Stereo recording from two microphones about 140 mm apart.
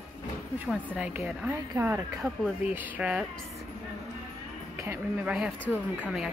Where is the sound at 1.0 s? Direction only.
10° right (ahead or behind).